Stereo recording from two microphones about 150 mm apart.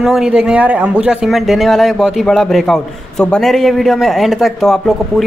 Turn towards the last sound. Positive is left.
turn(degrees=0)  # may be behind; listen again after turning